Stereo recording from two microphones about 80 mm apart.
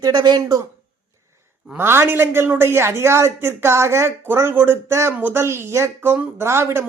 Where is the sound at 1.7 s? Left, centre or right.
Right.